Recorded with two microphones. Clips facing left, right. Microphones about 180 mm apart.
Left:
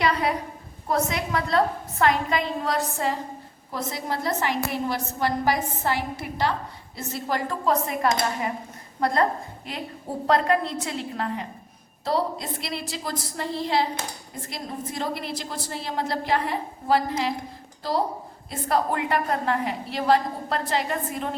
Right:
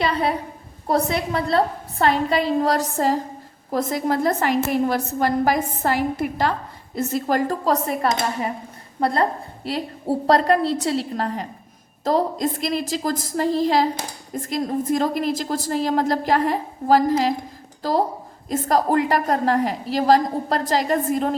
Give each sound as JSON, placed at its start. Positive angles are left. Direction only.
{"t": 0.0, "sound": "a sound", "side_deg": -30}
{"t": 0.9, "sound": "a woman's voice", "side_deg": -35}
{"t": 9.0, "sound": "a woman's voice", "side_deg": -30}
{"t": 18.4, "sound": "a woman's voice", "side_deg": -40}